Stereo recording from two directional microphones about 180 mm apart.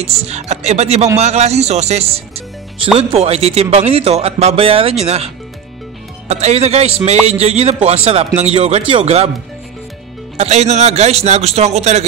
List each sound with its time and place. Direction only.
0.0 s speech: 35° right (ahead or behind)
10.3 s speech: 35° right (ahead or behind)